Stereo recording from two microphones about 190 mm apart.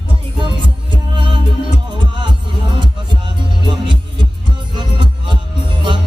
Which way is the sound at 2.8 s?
25° right (ahead or behind).